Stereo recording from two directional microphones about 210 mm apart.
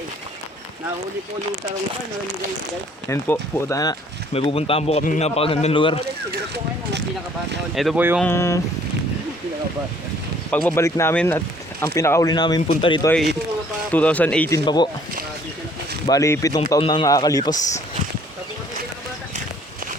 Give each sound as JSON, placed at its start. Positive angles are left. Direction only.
{"t": 3.1, "sound": "speech", "side_deg": 15}
{"t": 4.4, "sound": "a man's voice", "side_deg": 25}
{"t": 6.3, "sound": "speech", "side_deg": -50}
{"t": 7.8, "sound": "speech", "side_deg": -5}
{"t": 8.2, "sound": "speech", "side_deg": 10}
{"t": 10.5, "sound": "a man's voice", "side_deg": 10}
{"t": 13.9, "sound": "speech", "side_deg": 5}
{"t": 14.6, "sound": "a man's voice", "side_deg": 20}
{"t": 16.0, "sound": "speech", "side_deg": 15}